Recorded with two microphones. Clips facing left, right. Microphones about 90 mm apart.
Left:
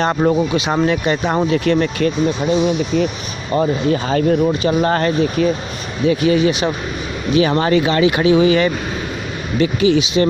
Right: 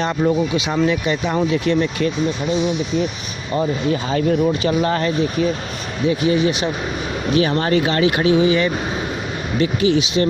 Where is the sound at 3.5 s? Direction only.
45° left (ahead or behind).